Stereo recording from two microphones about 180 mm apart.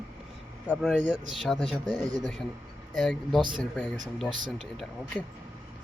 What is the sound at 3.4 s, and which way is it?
Speech, 25° right (ahead or behind).